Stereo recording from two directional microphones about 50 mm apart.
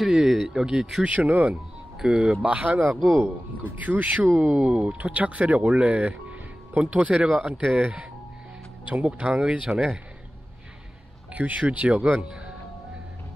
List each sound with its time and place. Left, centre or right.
0.3 s speech: centre
1.0 s speech: right
2.0 s speech: centre
2.6 s speech: right
3.1 s speech: right
3.6 s speech: right
4.4 s speech: right
11.3 s speech: right
12.3 s music: centre